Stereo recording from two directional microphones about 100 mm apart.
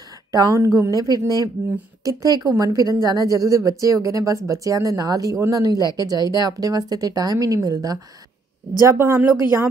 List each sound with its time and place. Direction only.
0.3 s a woman's voice: 35° right (ahead or behind)
8.7 s speech: 30° right (ahead or behind)